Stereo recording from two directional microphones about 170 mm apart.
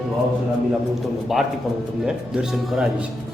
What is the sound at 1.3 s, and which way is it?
Speech, centre (ahead or behind).